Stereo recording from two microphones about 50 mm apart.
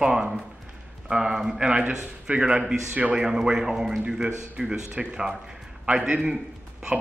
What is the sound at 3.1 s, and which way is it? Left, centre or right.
A man's voice, centre.